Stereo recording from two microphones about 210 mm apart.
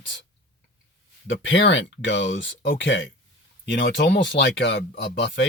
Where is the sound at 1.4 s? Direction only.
60° left (ahead or behind).